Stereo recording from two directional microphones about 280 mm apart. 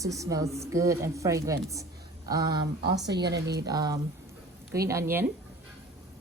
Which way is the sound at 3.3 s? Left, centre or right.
Right.